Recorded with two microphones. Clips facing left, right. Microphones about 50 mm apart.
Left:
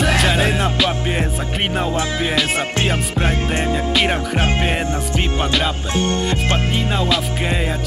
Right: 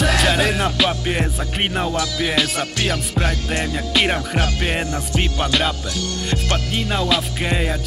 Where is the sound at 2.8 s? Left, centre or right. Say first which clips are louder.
Left 2 dB; left.